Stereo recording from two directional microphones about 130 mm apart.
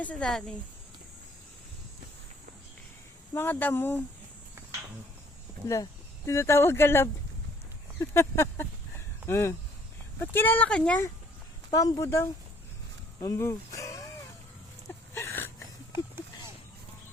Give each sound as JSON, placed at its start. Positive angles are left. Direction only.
{"t": 0.0, "sound": "speech", "side_deg": 10}
{"t": 3.3, "sound": "speech", "side_deg": 15}
{"t": 5.6, "sound": "speech", "side_deg": 25}
{"t": 11.7, "sound": "speech", "side_deg": 25}
{"t": 15.1, "sound": "a sound", "side_deg": 20}